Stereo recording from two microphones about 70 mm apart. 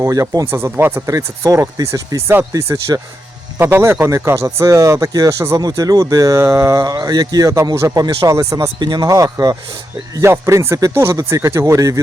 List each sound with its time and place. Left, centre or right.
0.0 s speech: right
0.5 s speech: right
1.0 s speech: right
1.5 s speech: right
2.5 s speech: right
3.6 s speech: right
5.5 s speech: right
6.3 s speech: right
6.8 s speech: right
8.8 s speech: right
9.0 s speech: right